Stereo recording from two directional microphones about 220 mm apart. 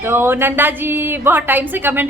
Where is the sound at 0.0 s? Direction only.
10° right (ahead or behind).